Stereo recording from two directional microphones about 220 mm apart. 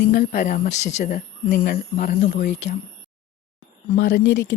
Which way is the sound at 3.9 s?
50° left (ahead or behind).